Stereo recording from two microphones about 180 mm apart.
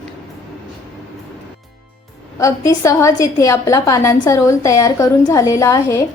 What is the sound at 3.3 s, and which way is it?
A woman's voice, 20° left (ahead or behind).